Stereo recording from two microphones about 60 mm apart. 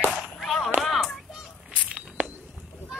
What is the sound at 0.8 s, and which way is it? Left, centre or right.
Music, centre.